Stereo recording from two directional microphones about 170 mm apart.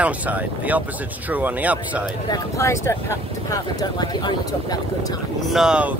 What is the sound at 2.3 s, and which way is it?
Speech, 15° left (ahead or behind).